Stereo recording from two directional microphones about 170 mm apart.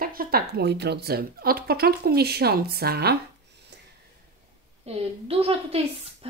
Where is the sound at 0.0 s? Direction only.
60° right (ahead or behind).